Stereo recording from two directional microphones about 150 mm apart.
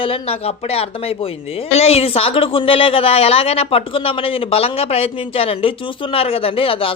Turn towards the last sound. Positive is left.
turn(degrees=35)  # may be behind; listen again after turning